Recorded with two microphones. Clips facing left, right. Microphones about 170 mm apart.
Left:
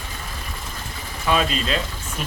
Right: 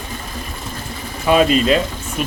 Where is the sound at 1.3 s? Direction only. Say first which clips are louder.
Right 8 dB; 10° right (ahead or behind).